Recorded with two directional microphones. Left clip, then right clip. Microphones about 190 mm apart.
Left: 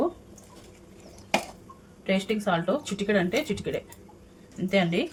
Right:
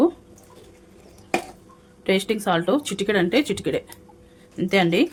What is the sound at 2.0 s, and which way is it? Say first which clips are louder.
Speech: right 5 dB; 60° right (ahead or behind).